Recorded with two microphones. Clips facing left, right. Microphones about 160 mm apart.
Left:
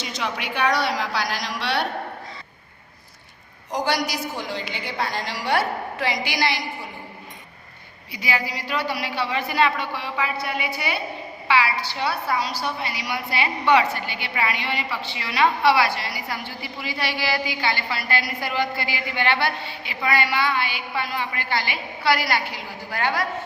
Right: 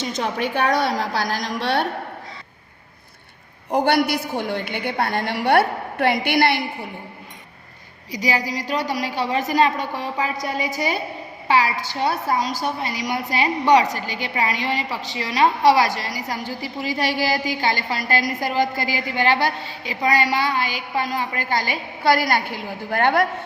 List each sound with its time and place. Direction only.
0.0 s a woman's voice: 45° right (ahead or behind)
3.7 s a woman's voice: 60° right (ahead or behind)
8.1 s a woman's voice: 40° right (ahead or behind); by 23.2 s 55° right (ahead or behind)